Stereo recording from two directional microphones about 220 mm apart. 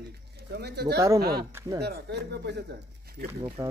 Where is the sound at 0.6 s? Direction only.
50° right (ahead or behind).